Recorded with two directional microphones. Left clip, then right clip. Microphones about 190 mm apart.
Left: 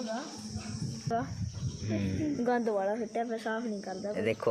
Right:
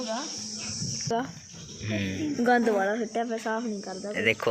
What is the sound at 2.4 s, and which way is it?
Speech, 45° right (ahead or behind).